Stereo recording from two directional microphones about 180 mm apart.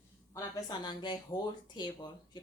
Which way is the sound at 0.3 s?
20° left (ahead or behind).